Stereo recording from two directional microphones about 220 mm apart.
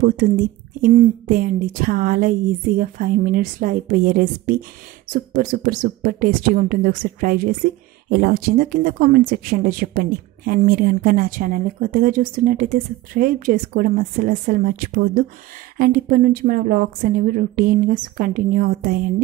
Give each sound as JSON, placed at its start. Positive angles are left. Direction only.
{"t": 0.8, "sound": "speech", "side_deg": -40}